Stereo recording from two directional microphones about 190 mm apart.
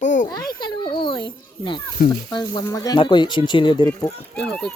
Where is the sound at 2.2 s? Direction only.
20° left (ahead or behind).